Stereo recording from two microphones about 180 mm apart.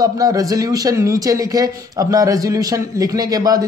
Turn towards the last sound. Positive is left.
turn(degrees=-20)  # may be behind; listen again after turning